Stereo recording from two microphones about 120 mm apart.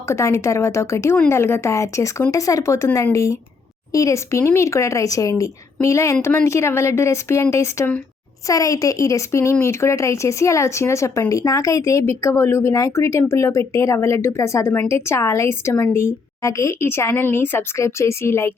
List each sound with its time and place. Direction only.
0.1 s speech: 25° left (ahead or behind)